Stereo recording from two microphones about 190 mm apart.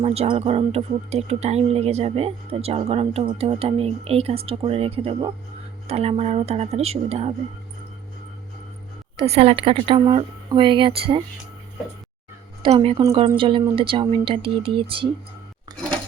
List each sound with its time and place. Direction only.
0.0 s speech: 35° right (ahead or behind)
9.1 s speech: 30° right (ahead or behind)
12.6 s speech: 30° right (ahead or behind)